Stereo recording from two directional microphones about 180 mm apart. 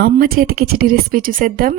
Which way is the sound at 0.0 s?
55° right (ahead or behind).